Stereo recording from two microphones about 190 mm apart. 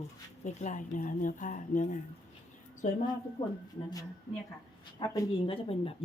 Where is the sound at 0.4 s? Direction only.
40° left (ahead or behind).